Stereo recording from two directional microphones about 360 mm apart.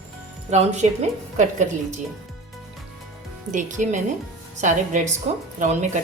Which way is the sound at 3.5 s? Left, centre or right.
Centre.